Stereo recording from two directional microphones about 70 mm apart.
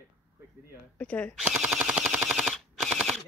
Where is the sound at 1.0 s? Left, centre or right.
Centre.